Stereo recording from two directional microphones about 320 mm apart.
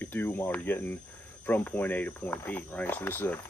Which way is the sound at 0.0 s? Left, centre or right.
Centre.